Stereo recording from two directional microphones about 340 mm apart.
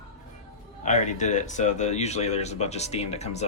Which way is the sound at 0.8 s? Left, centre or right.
Left.